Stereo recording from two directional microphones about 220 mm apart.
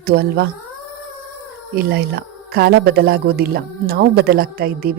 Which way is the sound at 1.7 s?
45° right (ahead or behind).